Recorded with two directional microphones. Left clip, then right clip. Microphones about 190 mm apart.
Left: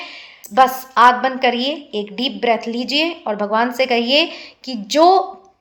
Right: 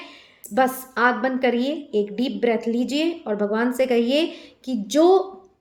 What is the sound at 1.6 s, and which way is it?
Speech, 35° left (ahead or behind).